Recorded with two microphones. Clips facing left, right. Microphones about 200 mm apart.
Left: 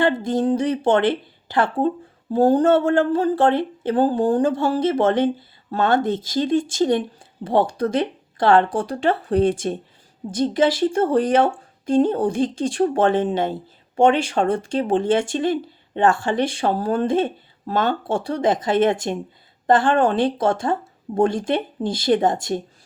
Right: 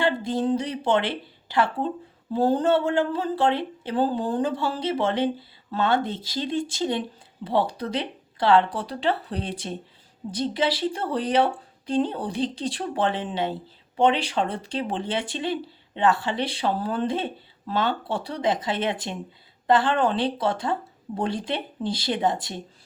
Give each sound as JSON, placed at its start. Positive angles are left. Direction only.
{"t": 0.0, "sound": "speech", "side_deg": 50}